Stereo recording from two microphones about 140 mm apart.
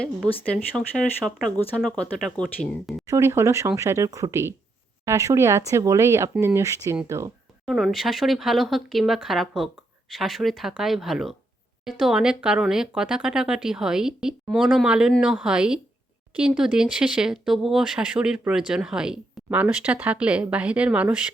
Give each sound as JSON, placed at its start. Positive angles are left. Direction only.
{"t": 0.8, "sound": "speech", "side_deg": 0}
{"t": 3.1, "sound": "speech", "side_deg": -20}
{"t": 7.6, "sound": "speech", "side_deg": 0}